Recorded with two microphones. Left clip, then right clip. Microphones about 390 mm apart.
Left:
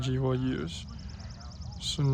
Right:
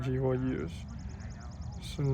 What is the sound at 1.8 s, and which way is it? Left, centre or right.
Speech, centre.